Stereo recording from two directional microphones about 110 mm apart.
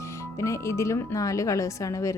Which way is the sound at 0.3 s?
25° left (ahead or behind).